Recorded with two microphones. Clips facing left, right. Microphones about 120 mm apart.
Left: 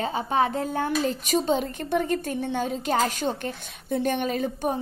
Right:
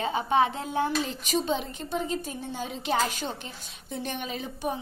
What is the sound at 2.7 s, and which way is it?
A woman's voice, 45° left (ahead or behind).